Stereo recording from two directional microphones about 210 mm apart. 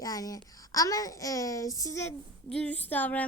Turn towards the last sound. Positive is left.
turn(degrees=10)  # may be behind; listen again after turning